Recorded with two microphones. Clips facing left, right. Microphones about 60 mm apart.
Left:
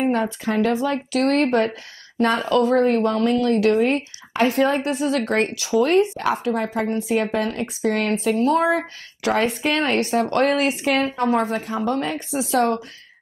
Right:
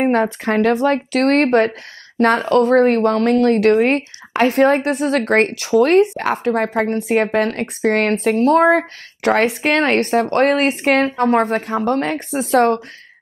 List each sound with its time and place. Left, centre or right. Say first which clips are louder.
0.0 s speech: right 5 dB; right